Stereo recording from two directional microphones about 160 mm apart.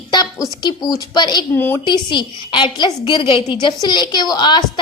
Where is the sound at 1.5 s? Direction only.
15° left (ahead or behind).